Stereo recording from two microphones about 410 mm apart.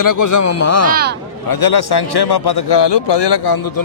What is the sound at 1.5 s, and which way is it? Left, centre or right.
A man's voice, left.